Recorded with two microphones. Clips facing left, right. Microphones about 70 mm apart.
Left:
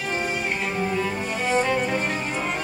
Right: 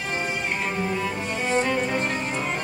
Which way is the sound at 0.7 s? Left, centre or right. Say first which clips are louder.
Left 1 dB; centre.